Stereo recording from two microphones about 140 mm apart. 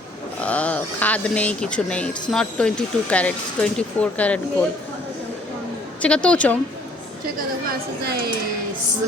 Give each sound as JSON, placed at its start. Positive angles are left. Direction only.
{"t": 0.4, "sound": "speech", "side_deg": 10}
{"t": 6.0, "sound": "speech", "side_deg": 5}
{"t": 7.7, "sound": "speech", "side_deg": -90}